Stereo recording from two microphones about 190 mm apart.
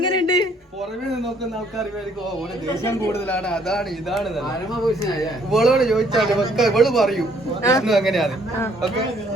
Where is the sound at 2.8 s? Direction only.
15° left (ahead or behind).